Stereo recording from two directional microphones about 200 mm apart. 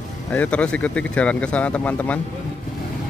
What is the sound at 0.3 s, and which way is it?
Speech, 5° left (ahead or behind).